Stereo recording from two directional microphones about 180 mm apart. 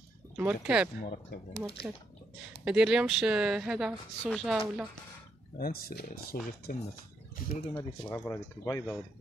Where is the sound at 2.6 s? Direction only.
5° right (ahead or behind).